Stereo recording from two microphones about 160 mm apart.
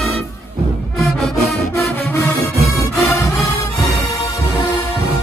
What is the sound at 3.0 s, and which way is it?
Music, 15° left (ahead or behind).